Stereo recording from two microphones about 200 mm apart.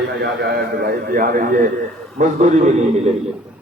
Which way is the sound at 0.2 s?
50° right (ahead or behind).